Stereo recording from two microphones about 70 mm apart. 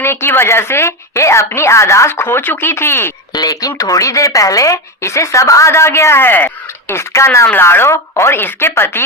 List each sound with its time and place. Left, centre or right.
0.0 s a woman's voice: left
3.3 s a woman's voice: left